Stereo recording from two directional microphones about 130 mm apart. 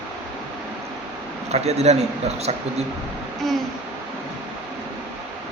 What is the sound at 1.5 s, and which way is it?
Speech, 55° right (ahead or behind).